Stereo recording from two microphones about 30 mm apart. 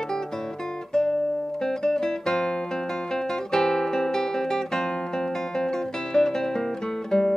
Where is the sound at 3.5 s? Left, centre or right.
Centre.